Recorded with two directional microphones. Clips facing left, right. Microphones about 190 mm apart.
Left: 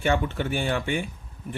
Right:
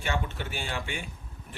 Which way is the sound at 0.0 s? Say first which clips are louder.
Left 8 dB; 55° left (ahead or behind).